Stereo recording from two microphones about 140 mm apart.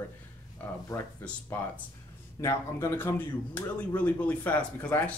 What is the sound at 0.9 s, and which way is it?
Speech, 25° left (ahead or behind).